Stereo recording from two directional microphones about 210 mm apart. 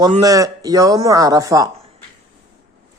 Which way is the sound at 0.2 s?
15° right (ahead or behind).